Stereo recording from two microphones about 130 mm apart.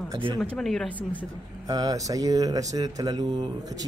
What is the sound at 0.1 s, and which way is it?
Speech, 35° right (ahead or behind).